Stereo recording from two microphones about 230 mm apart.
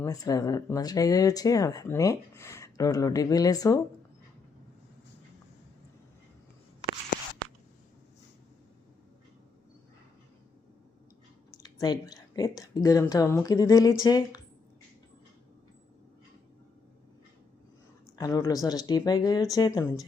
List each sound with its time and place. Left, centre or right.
0.0 s speech: centre
11.5 s speech: centre
18.2 s speech: centre